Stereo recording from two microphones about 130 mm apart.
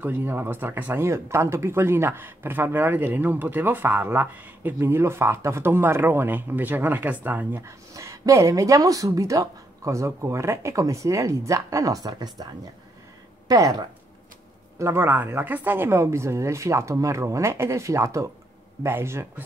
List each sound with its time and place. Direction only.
0.0 s speech: 15° right (ahead or behind); by 12.4 s 30° right (ahead or behind)
13.5 s speech: 25° right (ahead or behind)